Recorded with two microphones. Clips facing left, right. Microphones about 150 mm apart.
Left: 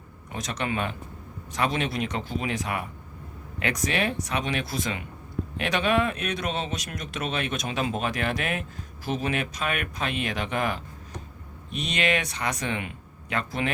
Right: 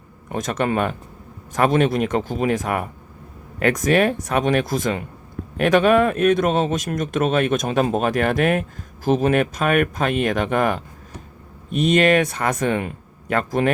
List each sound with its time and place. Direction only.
0.3 s speech: 50° right (ahead or behind)